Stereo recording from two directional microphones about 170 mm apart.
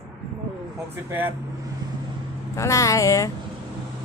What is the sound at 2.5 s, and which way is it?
Speech, 20° left (ahead or behind).